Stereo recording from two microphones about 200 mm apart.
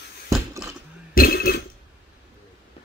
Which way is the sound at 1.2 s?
45° left (ahead or behind).